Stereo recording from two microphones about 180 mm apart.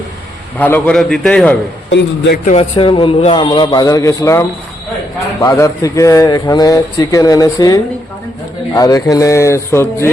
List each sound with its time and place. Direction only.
0.6 s a man's voice: 5° left (ahead or behind)
1.9 s a man's voice: 70° left (ahead or behind)
2.4 s speech: 35° left (ahead or behind); by 10.1 s 15° left (ahead or behind)